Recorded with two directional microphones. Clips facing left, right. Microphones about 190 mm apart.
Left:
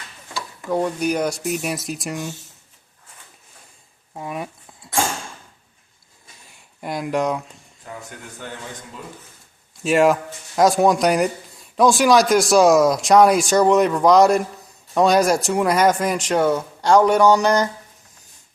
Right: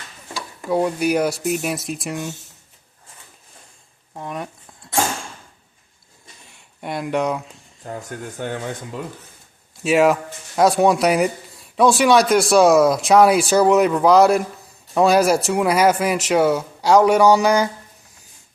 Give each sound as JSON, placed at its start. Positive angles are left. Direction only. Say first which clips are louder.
{"t": 0.7, "sound": "speech", "louder": "right 2 dB", "side_deg": -5}
{"t": 4.1, "sound": "a sound", "louder": "even", "side_deg": 5}
{"t": 6.8, "sound": "speech", "louder": "even", "side_deg": 0}
{"t": 8.4, "sound": "speech", "louder": "right 8 dB", "side_deg": -60}
{"t": 9.8, "sound": "speech", "louder": "even", "side_deg": 0}